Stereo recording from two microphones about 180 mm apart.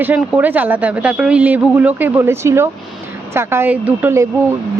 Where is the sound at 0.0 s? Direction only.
10° right (ahead or behind).